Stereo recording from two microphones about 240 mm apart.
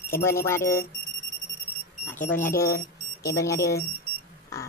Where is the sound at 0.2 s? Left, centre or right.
Centre.